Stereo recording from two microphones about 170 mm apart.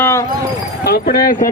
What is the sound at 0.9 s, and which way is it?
Speech, 60° left (ahead or behind).